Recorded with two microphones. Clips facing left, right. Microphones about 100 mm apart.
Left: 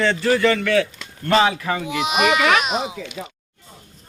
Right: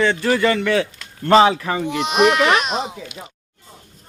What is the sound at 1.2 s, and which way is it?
Speech, 30° right (ahead or behind).